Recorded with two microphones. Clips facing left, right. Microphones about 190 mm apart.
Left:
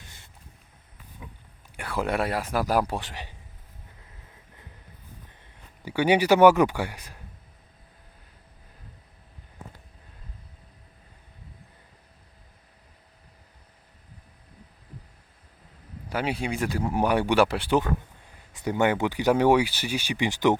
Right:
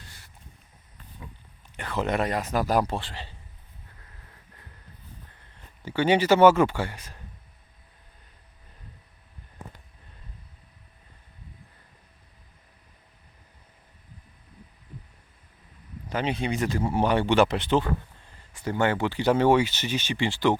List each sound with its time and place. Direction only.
0.0 s vehicle: 20° left (ahead or behind)
1.7 s speech: 10° left (ahead or behind)
5.3 s speech: 15° left (ahead or behind)
16.0 s speech: 10° left (ahead or behind)